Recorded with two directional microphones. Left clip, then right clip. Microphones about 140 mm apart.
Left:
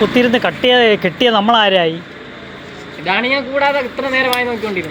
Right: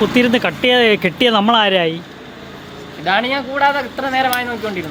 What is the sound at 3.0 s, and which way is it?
Speech, 30° right (ahead or behind).